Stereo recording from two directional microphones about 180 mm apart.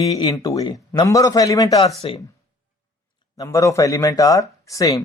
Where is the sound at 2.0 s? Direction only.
30° left (ahead or behind).